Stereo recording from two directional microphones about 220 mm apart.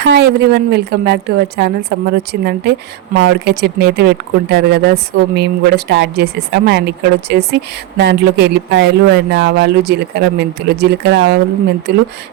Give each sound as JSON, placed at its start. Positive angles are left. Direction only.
{"t": 0.0, "sound": "speech", "side_deg": -50}